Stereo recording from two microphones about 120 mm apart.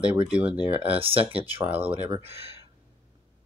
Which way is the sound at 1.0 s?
50° right (ahead or behind).